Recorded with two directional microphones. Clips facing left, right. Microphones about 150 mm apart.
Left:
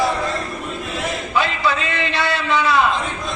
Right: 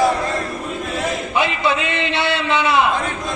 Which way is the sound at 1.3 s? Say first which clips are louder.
Even; 20° right (ahead or behind).